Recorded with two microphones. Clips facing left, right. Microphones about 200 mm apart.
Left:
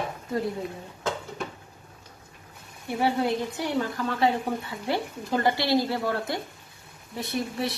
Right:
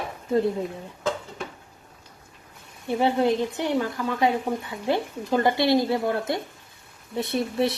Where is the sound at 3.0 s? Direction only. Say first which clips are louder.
Right 3 dB; 20° right (ahead or behind).